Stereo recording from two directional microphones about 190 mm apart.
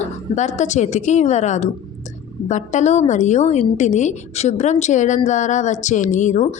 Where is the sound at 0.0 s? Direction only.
40° left (ahead or behind).